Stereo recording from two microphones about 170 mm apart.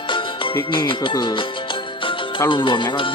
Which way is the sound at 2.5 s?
30° left (ahead or behind).